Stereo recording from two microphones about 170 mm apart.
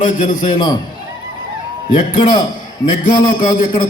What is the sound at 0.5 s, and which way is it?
Speech, 25° left (ahead or behind).